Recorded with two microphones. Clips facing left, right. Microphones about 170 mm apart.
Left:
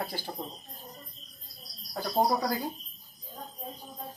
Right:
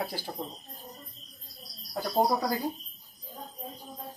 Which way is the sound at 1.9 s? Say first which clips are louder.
Right 1 dB; centre (ahead or behind).